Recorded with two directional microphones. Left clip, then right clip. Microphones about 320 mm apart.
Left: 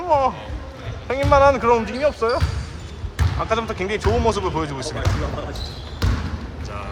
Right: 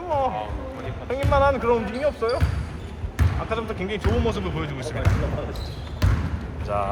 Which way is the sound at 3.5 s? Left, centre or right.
Left.